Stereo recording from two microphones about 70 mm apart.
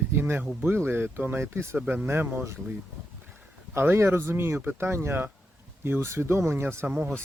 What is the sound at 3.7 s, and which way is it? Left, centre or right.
Speech, right.